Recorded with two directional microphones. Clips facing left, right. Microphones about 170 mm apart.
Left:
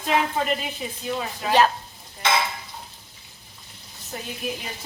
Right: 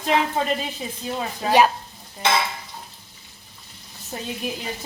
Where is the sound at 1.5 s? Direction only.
10° right (ahead or behind).